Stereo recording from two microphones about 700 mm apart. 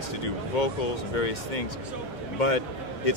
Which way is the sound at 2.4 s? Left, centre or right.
Left.